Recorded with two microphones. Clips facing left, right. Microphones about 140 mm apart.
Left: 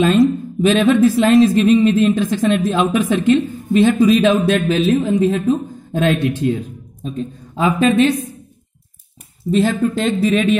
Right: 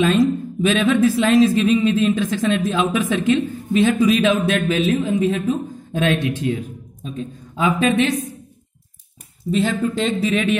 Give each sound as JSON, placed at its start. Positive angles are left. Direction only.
{"t": 0.2, "sound": "a woman's voice", "side_deg": 35}
{"t": 7.0, "sound": "a woman's voice", "side_deg": 35}
{"t": 9.5, "sound": "speech", "side_deg": 40}